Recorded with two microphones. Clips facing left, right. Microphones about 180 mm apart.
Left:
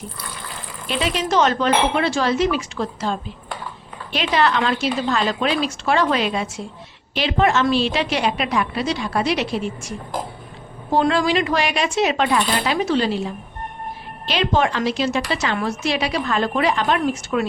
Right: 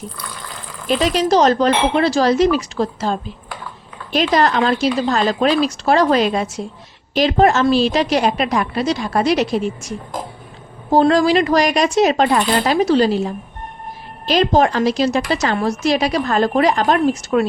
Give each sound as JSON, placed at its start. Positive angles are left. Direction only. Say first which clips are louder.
{"t": 0.9, "sound": "a woman's voice", "louder": "right 6 dB", "side_deg": -40}
{"t": 10.9, "sound": "a woman's voice", "louder": "right 5 dB", "side_deg": -40}